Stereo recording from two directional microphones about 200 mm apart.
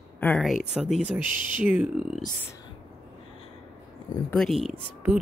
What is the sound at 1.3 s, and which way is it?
Speech, 40° right (ahead or behind).